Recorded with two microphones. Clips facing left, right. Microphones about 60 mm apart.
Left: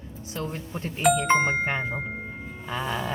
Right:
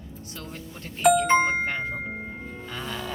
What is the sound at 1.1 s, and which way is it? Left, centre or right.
Speech, centre.